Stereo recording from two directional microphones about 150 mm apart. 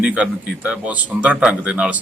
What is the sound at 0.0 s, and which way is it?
Speech, 10° right (ahead or behind).